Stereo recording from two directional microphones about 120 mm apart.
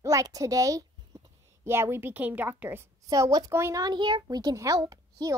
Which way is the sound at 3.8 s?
40° right (ahead or behind).